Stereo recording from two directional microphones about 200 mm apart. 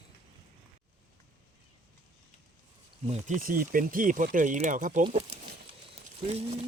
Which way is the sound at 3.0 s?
35° right (ahead or behind).